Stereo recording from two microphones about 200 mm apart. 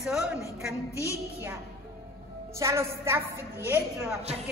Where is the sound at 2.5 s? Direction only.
15° right (ahead or behind).